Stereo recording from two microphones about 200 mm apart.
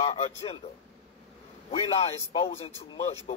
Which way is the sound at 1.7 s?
30° left (ahead or behind).